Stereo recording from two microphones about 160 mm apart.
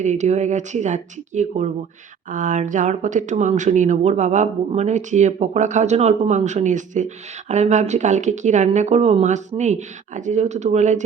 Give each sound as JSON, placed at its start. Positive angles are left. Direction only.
{"t": 0.0, "sound": "speech", "side_deg": -45}